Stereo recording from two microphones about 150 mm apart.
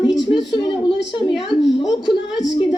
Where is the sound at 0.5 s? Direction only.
30° left (ahead or behind).